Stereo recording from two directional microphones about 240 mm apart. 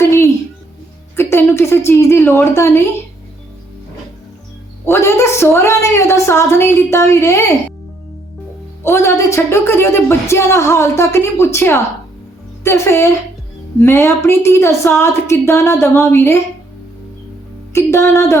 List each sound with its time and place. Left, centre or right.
1.1 s a sound: centre
4.9 s speech: centre
8.8 s speech: centre
17.7 s speech: centre